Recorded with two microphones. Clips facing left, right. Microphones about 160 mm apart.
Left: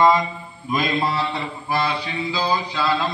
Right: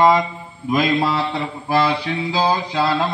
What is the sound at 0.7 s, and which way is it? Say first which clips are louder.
Mantra: right 4 dB; 75° right (ahead or behind).